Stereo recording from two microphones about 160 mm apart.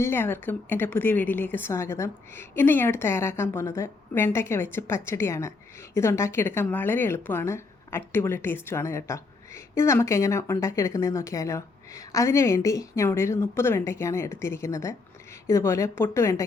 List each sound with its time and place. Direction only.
0.0 s a woman's voice: 15° left (ahead or behind)